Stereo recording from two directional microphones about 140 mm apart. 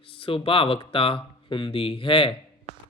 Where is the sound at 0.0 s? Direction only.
40° left (ahead or behind).